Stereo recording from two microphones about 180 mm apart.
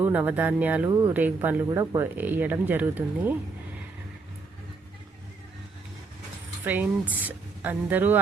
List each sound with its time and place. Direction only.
0.0 s speech: 10° right (ahead or behind)
0.9 s speech: 20° right (ahead or behind)
1.1 s speech: 10° right (ahead or behind)
7.1 s speech: 10° right (ahead or behind)